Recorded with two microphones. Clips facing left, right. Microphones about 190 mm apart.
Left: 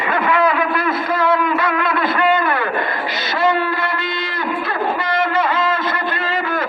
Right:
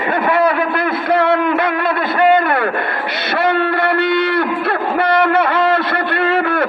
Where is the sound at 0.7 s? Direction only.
65° right (ahead or behind).